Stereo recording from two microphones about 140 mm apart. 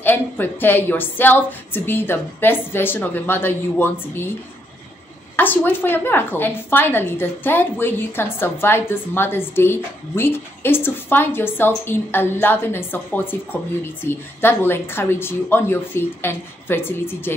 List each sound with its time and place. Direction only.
0.0 s a woman's voice: 15° left (ahead or behind)
5.3 s a woman's voice: 15° left (ahead or behind)